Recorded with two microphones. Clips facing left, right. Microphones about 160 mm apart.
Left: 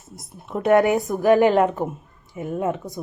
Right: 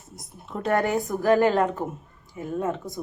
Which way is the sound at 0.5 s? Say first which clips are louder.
Left 6 dB; 15° left (ahead or behind).